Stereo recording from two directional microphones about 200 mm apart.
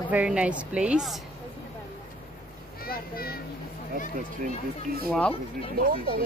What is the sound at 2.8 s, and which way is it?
Children playing, 50° left (ahead or behind).